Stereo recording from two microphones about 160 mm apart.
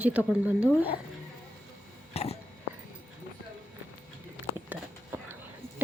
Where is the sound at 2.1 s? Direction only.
40° left (ahead or behind).